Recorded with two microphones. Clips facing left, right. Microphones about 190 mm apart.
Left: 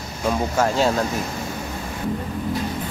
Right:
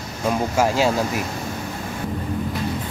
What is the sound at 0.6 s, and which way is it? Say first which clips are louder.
Speech: right 1 dB; 5° right (ahead or behind).